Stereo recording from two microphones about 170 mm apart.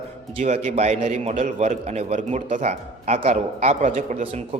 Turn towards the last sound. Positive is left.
turn(degrees=-40)  # may be behind; listen again after turning